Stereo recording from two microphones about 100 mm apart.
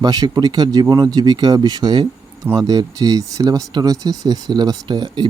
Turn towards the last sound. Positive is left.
turn(degrees=-45)  # may be behind; listen again after turning